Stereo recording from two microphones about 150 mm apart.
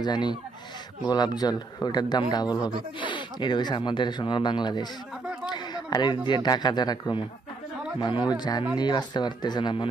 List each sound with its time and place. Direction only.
0.0 s a man's voice: 30° left (ahead or behind)